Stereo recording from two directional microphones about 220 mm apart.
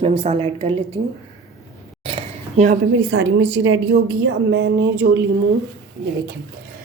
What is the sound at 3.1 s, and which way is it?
Speech, 55° right (ahead or behind).